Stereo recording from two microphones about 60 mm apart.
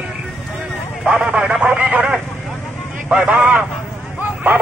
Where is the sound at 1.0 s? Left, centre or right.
Right.